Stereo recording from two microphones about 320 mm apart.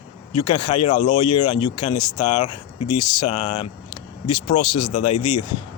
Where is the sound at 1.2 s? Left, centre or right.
Left.